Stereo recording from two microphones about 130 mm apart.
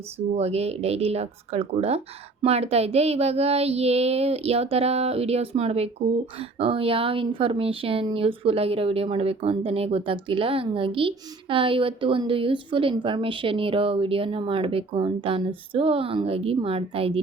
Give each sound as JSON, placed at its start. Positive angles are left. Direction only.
{"t": 0.3, "sound": "speech", "side_deg": -55}